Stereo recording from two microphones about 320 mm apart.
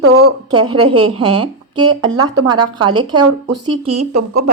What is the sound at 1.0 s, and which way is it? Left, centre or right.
Speech, centre.